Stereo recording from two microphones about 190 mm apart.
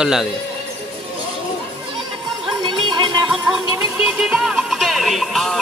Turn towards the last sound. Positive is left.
turn(degrees=0)  # may be behind; listen again after turning